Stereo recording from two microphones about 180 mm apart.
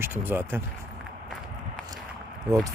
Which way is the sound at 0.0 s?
10° right (ahead or behind).